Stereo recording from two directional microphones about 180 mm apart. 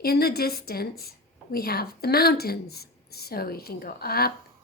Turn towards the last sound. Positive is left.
turn(degrees=60)  # may be behind; listen again after turning